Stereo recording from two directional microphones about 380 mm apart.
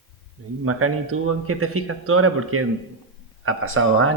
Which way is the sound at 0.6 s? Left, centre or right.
Right.